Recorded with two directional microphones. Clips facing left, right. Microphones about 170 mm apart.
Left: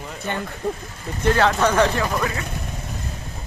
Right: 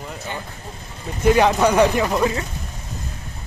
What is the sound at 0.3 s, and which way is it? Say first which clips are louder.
Speech: left 5 dB; 60° left (ahead or behind).